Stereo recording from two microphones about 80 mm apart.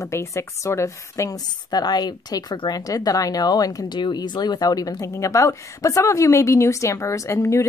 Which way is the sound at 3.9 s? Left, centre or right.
Left.